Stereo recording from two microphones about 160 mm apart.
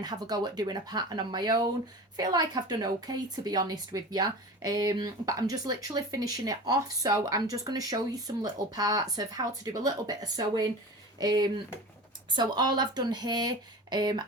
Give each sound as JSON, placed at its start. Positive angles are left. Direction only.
{"t": 0.0, "sound": "a woman's voice", "side_deg": -25}